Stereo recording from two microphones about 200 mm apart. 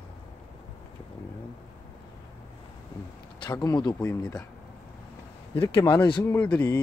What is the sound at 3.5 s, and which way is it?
Speech, 20° left (ahead or behind).